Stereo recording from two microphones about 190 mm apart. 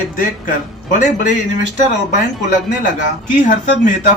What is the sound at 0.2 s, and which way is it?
Speech, 45° left (ahead or behind).